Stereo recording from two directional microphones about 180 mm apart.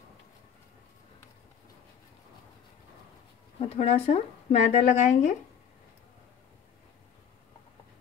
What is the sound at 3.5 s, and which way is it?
Speech, 35° left (ahead or behind).